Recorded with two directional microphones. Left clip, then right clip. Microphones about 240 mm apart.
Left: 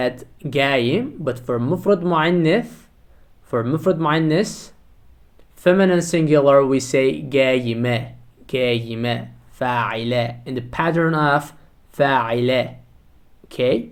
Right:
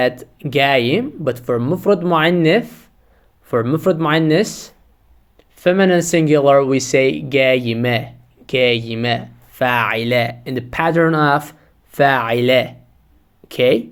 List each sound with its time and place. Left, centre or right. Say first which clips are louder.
0.0 s speech: right 5 dB; right